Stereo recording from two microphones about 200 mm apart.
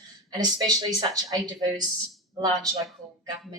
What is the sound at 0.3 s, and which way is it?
Speech, 20° right (ahead or behind).